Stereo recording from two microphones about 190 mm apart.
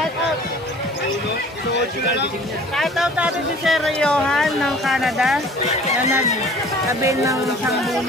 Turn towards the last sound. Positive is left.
turn(degrees=-15)  # may be behind; listen again after turning